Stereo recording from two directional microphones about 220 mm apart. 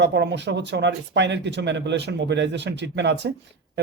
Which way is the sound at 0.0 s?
50° right (ahead or behind).